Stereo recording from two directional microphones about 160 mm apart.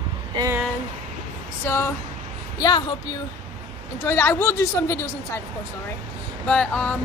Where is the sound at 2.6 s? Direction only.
30° left (ahead or behind).